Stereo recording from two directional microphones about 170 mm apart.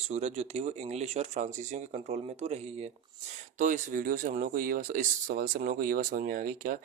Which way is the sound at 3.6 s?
50° right (ahead or behind).